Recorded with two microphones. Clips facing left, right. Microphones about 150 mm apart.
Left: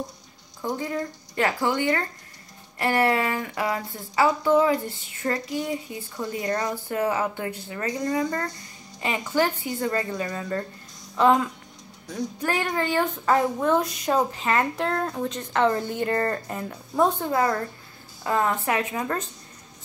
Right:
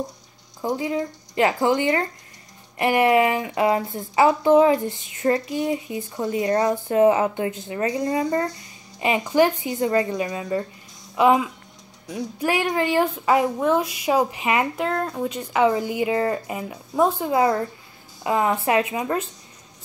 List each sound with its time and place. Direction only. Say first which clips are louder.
0.7 s speech: right 4 dB; 15° right (ahead or behind)
6.2 s speech: right 6 dB; 10° right (ahead or behind)
6.5 s speech: right 8 dB; 30° right (ahead or behind)
8.3 s speech: right 6 dB; 10° right (ahead or behind)